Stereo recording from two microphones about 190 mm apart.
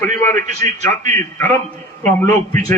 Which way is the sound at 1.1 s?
10° left (ahead or behind).